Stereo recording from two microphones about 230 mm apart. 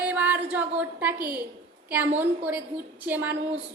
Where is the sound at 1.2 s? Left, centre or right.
Right.